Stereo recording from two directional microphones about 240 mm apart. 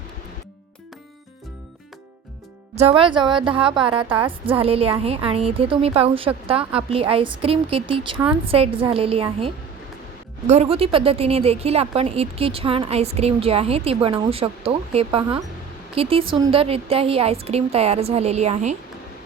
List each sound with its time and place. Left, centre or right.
2.7 s a woman's voice: right